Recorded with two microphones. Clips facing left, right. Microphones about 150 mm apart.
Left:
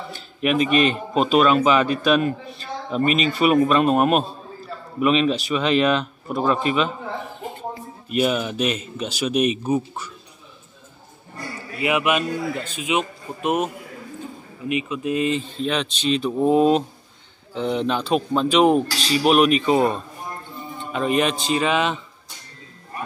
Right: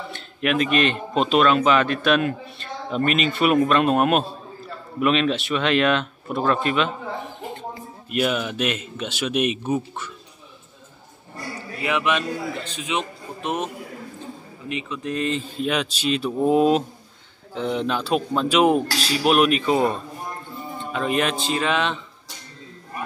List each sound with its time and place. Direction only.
0.1 s a man's voice: 5° left (ahead or behind)
8.2 s speech: centre (ahead or behind)
9.3 s speech: 40° left (ahead or behind)
9.6 s speech: centre (ahead or behind)
11.8 s a man's voice: 10° left (ahead or behind)
14.7 s a man's voice: 10° left (ahead or behind)
15.4 s speech: 10° right (ahead or behind)